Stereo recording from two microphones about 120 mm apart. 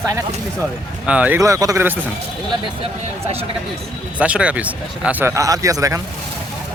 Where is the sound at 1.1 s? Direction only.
10° right (ahead or behind).